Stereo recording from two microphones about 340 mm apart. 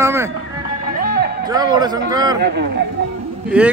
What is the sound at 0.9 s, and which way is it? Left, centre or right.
Music, right.